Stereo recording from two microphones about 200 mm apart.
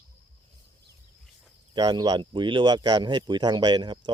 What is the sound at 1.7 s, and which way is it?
Speech, 20° right (ahead or behind).